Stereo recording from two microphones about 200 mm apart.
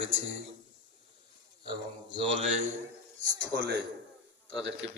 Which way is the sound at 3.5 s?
55° right (ahead or behind).